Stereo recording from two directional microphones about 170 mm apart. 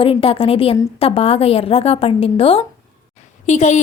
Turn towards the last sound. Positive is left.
turn(degrees=40)  # may be behind; listen again after turning